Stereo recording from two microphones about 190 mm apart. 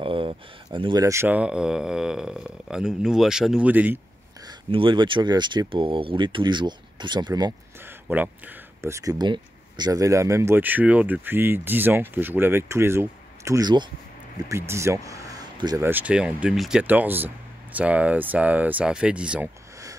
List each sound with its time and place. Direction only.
0.0 s speech: 30° right (ahead or behind); by 4.0 s 10° right (ahead or behind)
4.5 s speech: 25° right (ahead or behind)
7.8 s speech: 10° right (ahead or behind)
15.9 s speech: 5° right (ahead or behind)